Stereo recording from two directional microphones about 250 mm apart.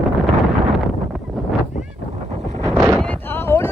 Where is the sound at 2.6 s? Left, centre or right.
Centre.